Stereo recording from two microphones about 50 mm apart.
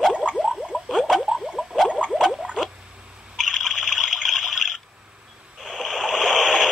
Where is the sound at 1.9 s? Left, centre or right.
Right.